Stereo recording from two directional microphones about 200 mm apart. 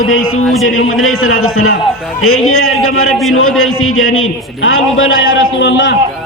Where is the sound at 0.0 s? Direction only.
90° left.